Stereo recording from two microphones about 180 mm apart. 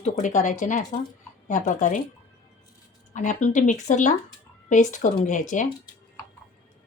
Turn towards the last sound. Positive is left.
turn(degrees=45)  # may be behind; listen again after turning